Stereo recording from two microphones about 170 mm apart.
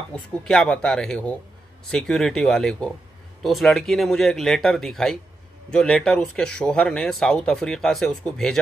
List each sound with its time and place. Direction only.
0.1 s speech: 5° left (ahead or behind)